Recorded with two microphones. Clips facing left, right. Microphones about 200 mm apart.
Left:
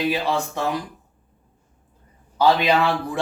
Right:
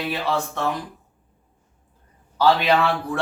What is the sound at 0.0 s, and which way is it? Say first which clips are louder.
Speech: left 2 dB; 15° left (ahead or behind).